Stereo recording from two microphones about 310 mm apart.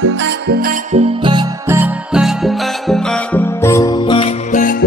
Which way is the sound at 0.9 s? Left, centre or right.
Centre.